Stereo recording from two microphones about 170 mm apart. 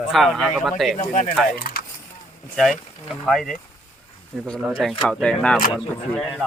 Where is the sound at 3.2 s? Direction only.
Centre (ahead or behind).